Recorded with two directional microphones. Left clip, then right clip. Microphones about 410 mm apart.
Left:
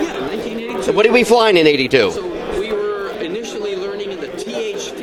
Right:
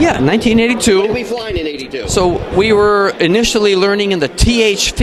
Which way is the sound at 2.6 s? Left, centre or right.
Right.